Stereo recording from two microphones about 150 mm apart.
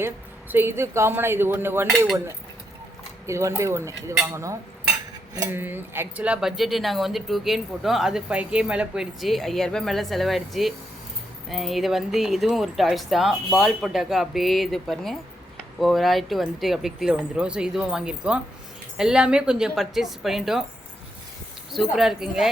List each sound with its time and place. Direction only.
0.5 s a woman's voice: 15° right (ahead or behind)
3.2 s a woman's voice: 20° right (ahead or behind); by 20.7 s centre (ahead or behind)
21.7 s speech: centre (ahead or behind)